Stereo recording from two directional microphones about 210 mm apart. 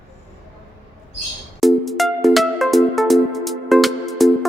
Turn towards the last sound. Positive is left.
turn(degrees=0)  # may be behind; listen again after turning